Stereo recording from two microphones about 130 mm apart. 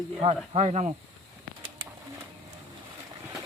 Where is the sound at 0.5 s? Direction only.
55° right (ahead or behind).